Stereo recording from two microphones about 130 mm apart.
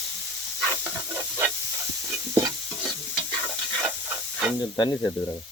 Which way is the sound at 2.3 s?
30° right (ahead or behind).